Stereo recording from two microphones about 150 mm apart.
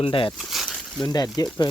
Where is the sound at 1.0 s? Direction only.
25° left (ahead or behind).